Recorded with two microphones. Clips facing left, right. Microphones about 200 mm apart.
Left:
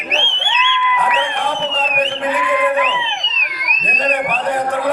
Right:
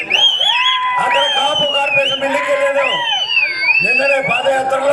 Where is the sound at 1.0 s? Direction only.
90° right.